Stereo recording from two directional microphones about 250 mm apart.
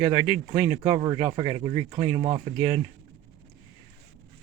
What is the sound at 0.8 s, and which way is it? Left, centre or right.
Speech, right.